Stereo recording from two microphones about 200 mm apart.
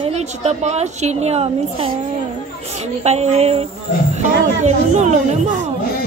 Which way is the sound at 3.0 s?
35° right (ahead or behind).